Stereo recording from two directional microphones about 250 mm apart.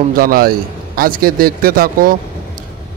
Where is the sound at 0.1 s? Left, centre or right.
Right.